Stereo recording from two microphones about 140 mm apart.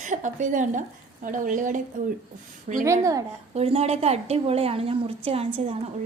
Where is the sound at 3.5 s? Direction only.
50° right (ahead or behind).